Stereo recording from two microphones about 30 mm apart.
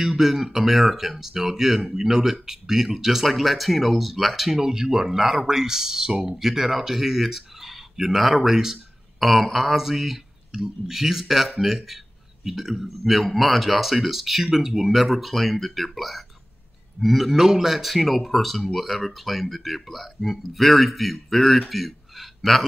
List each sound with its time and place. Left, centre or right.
0.0 s speech: centre
3.3 s speech: centre
4.5 s speech: centre
9.2 s speech: centre